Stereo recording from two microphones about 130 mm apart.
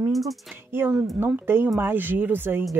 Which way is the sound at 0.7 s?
15° right (ahead or behind).